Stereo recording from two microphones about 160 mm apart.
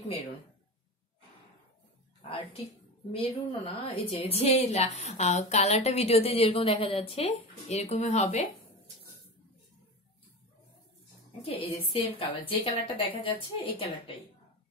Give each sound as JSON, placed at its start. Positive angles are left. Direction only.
{"t": 2.2, "sound": "a woman's voice", "side_deg": 35}
{"t": 11.4, "sound": "a woman's voice", "side_deg": 35}